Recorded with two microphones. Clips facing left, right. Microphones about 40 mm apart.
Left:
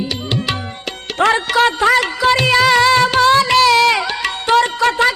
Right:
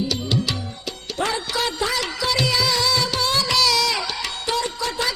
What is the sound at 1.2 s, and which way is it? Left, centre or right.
Music, left.